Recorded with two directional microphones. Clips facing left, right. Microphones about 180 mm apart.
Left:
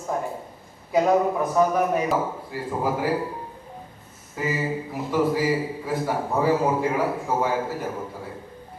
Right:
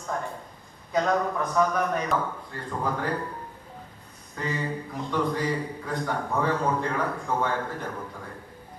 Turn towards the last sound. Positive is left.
turn(degrees=5)  # may be behind; listen again after turning